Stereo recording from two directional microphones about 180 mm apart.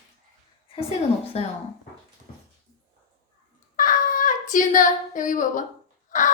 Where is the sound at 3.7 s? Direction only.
50° left (ahead or behind).